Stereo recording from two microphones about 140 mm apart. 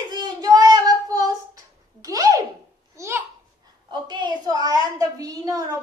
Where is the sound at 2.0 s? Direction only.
25° right (ahead or behind).